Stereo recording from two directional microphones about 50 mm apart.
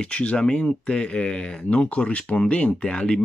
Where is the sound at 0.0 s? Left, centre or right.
Left.